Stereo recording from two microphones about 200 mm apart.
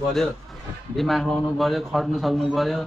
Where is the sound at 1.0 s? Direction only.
Centre (ahead or behind).